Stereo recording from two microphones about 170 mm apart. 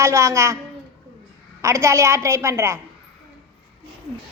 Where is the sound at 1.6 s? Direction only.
15° right (ahead or behind).